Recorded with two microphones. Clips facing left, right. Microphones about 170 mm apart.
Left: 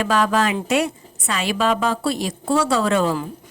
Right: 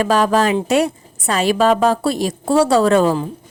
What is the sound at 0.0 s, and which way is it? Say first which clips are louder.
A woman's voice: right 4 dB; 40° right (ahead or behind).